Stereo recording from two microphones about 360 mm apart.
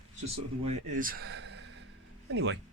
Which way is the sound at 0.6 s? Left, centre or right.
Centre.